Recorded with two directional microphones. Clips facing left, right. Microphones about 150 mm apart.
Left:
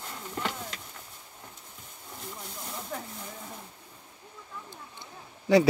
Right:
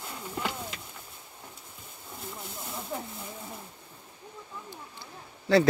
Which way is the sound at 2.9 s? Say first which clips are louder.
Right 2 dB; 5° right (ahead or behind).